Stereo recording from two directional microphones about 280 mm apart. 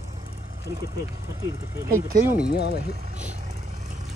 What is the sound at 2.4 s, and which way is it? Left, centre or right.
Speech, left.